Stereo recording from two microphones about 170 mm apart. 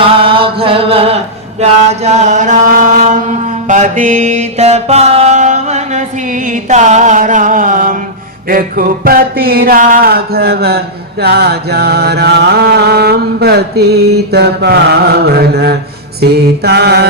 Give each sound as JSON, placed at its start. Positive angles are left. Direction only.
{"t": 0.0, "sound": "chant", "side_deg": -30}
{"t": 8.4, "sound": "music", "side_deg": -55}